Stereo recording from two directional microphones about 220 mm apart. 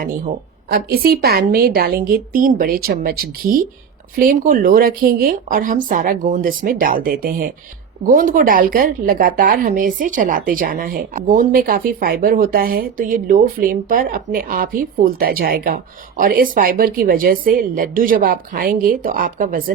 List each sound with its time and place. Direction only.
0.0 s a woman's voice: 40° right (ahead or behind)